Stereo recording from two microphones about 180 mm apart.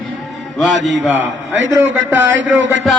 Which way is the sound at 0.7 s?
85° right.